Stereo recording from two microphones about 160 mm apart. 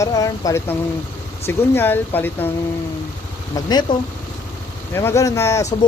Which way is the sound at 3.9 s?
30° left (ahead or behind).